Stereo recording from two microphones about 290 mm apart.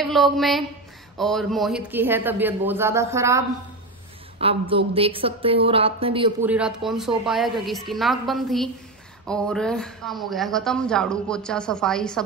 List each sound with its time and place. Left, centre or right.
0.0 s a man's voice: centre
6.4 s speech: centre